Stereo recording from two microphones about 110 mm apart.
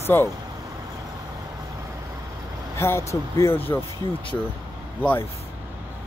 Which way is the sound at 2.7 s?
25° left (ahead or behind).